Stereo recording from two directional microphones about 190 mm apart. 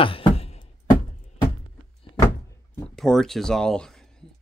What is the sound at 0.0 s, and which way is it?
Music, 30° left (ahead or behind).